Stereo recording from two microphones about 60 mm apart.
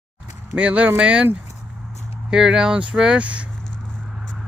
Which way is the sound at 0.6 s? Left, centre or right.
Right.